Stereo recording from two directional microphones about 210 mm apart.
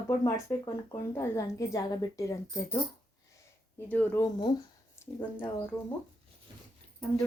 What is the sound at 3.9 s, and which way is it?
A woman's voice, 10° left (ahead or behind).